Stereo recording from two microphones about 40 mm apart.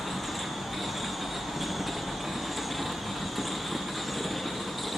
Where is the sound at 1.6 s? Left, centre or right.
Centre.